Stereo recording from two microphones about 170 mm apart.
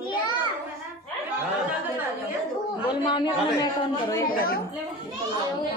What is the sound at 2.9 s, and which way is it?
A woman's voice, 25° left (ahead or behind).